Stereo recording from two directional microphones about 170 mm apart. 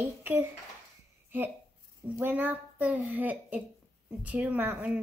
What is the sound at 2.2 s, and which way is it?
A woman's voice, 10° right (ahead or behind).